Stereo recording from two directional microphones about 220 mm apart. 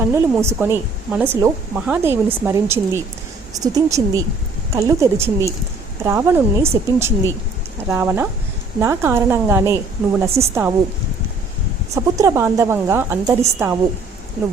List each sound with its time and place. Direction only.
0.1 s speech: 10° right (ahead or behind)
11.9 s speech: 15° right (ahead or behind)